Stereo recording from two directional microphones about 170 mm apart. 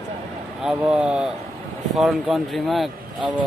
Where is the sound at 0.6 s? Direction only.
5° right (ahead or behind).